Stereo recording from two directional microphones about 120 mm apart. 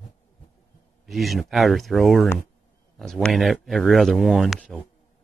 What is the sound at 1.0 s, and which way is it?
Speech, centre (ahead or behind).